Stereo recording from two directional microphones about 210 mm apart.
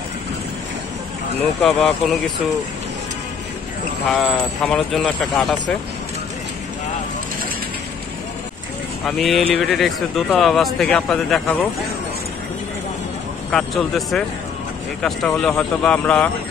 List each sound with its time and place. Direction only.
1.6 s speech: centre (ahead or behind)
4.1 s speech: centre (ahead or behind)
9.0 s speech: centre (ahead or behind)
13.5 s speech: centre (ahead or behind)